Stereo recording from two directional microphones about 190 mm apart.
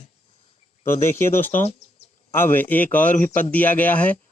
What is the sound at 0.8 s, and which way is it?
Speech, 15° left (ahead or behind).